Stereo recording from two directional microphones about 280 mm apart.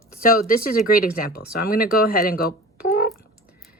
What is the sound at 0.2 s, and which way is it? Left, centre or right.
Speech, left.